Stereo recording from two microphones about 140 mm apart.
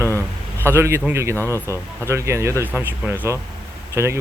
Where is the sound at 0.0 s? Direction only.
15° left (ahead or behind).